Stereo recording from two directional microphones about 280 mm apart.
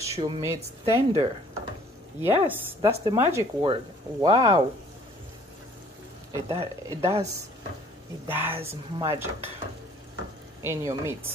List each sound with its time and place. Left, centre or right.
0.0 s a woman's voice: centre
6.5 s speech: centre
8.3 s speech: centre
10.6 s speech: centre